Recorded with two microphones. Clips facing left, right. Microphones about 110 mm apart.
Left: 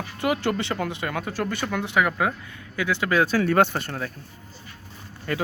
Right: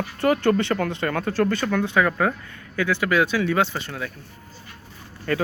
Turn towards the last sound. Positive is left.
turn(degrees=20)  # may be behind; listen again after turning